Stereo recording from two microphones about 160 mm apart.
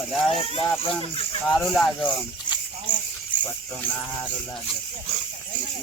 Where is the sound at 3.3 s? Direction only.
30° left (ahead or behind).